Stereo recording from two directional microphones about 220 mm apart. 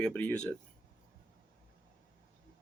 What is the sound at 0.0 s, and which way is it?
Speech, 5° left (ahead or behind).